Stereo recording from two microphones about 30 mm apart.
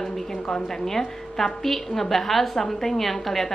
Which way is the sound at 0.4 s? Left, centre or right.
Left.